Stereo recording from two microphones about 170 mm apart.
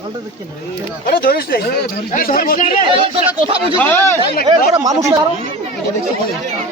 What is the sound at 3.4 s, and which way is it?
Speech, 35° right (ahead or behind).